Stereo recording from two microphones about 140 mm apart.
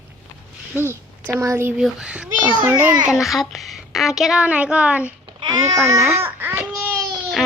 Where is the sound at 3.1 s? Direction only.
Centre (ahead or behind).